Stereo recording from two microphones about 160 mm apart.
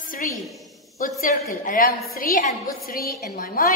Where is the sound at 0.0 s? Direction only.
60° left (ahead or behind).